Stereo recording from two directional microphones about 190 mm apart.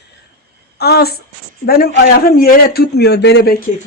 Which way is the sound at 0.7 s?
55° left (ahead or behind).